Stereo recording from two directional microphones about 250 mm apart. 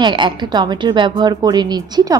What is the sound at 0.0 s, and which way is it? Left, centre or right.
A woman's voice, centre.